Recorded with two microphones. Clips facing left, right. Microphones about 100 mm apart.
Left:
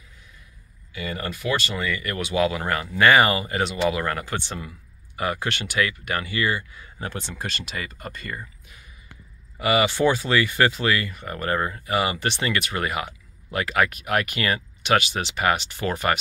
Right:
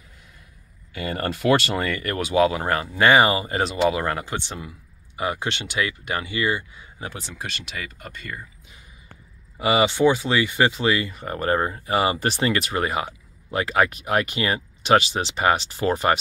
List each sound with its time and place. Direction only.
0.9 s speech: 55° right (ahead or behind)
1.8 s speech: 45° right (ahead or behind); by 6.9 s 20° right (ahead or behind)
7.0 s speech: 5° right (ahead or behind)
9.6 s speech: 25° right (ahead or behind)